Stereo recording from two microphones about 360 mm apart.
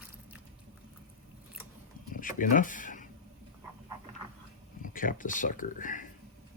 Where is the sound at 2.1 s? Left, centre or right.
Left.